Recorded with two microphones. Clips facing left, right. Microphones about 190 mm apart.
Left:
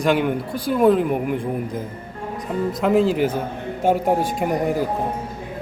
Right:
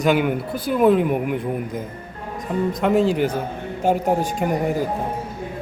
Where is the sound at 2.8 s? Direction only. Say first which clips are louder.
Left 1 dB; centre (ahead or behind).